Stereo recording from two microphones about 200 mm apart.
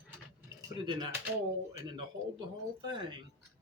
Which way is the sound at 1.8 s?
20° right (ahead or behind).